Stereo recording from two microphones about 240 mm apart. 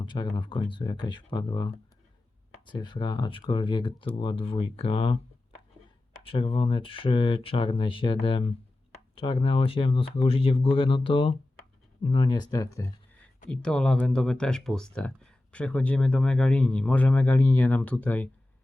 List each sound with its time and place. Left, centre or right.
0.0 s speech: centre